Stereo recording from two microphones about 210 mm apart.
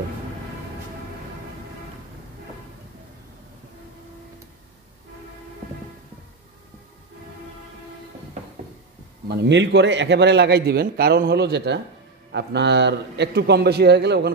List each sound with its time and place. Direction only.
9.3 s a man's voice: 55° right (ahead or behind)